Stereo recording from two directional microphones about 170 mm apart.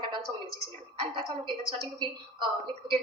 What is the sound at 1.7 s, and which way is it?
A woman's voice, 30° right (ahead or behind).